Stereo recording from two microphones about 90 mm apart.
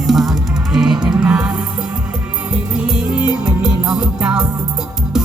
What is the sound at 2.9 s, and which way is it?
Music, 10° right (ahead or behind).